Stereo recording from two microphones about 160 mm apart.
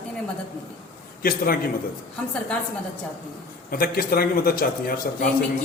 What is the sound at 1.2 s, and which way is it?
Speech, 65° left (ahead or behind).